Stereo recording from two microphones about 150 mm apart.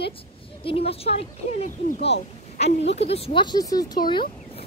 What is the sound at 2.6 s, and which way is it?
Speech, 45° left (ahead or behind).